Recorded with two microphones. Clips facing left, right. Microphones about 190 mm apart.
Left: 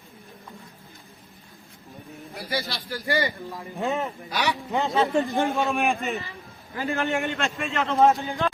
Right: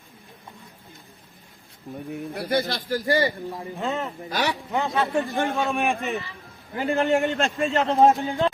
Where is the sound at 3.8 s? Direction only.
15° left (ahead or behind).